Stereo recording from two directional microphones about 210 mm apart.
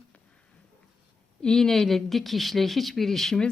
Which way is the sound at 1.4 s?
5° left (ahead or behind).